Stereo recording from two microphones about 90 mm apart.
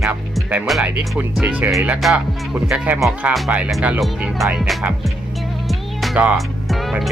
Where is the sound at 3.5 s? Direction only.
20° right (ahead or behind).